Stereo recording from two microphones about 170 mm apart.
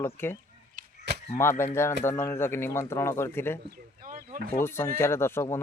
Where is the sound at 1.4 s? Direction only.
15° left (ahead or behind).